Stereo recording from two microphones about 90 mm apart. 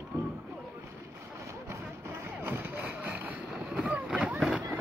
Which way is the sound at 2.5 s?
15° right (ahead or behind).